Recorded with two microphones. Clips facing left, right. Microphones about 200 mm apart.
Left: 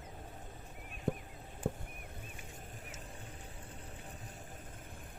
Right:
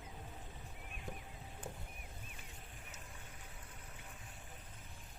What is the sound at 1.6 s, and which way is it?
Rowboat, 60° left (ahead or behind).